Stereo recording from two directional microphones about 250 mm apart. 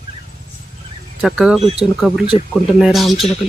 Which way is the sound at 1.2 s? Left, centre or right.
Centre.